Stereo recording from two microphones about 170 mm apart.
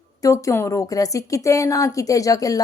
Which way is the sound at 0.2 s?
20° left (ahead or behind).